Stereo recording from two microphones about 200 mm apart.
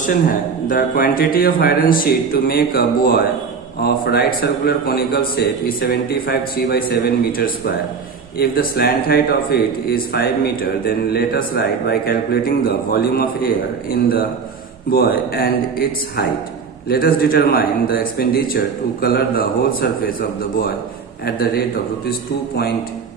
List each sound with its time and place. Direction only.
0.0 s a man's voice: 45° left (ahead or behind)
22.1 s a man's voice: 55° left (ahead or behind)